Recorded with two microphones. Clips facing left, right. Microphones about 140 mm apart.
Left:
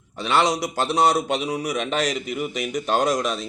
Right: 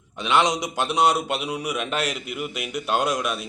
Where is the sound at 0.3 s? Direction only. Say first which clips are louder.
Left 1 dB; 15° right (ahead or behind).